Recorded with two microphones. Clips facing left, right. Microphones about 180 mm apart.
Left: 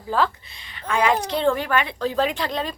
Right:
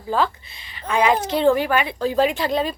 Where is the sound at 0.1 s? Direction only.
Centre (ahead or behind).